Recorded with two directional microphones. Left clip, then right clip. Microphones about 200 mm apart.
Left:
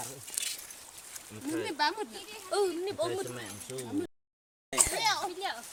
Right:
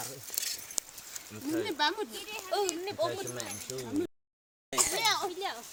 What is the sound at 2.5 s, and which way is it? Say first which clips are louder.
Speech: left 2 dB; 60° left (ahead or behind).